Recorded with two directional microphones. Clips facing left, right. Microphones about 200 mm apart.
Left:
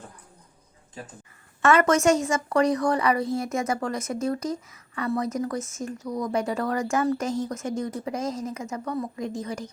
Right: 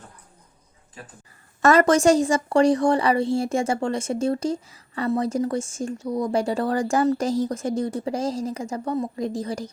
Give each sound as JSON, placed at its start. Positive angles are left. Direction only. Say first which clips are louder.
{"t": 1.6, "sound": "a woman's voice", "louder": "right 3 dB", "side_deg": -35}